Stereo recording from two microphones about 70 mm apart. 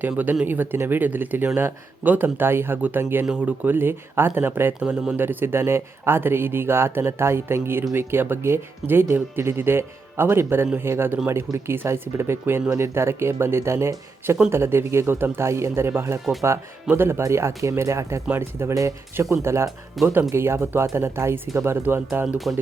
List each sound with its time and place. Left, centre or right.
0.0 s speech: right
4.8 s speech: centre
5.1 s speech: right
17.2 s speech: right
20.0 s speech: centre
20.3 s speech: right